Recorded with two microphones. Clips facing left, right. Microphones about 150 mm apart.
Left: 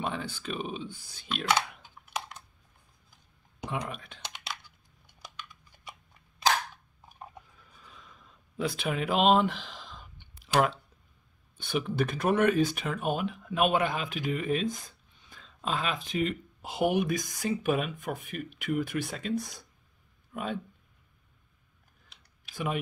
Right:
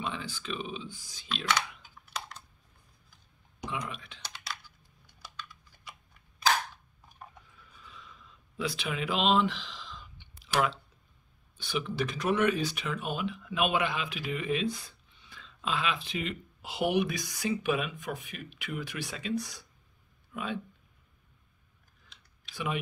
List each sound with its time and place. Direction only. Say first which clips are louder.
0.0 s speech: left 3 dB; 55° left (ahead or behind)
3.9 s speech: left 2 dB; 50° left (ahead or behind)
4.2 s typing: left 2 dB; 20° left (ahead or behind)
7.6 s a sound: right 1 dB; 45° left (ahead or behind)
11.5 s speech: left 3 dB; 50° left (ahead or behind)
22.5 s speech: left 2 dB; 45° left (ahead or behind)